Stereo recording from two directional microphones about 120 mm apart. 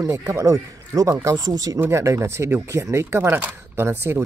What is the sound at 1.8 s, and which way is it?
Speech, 20° right (ahead or behind).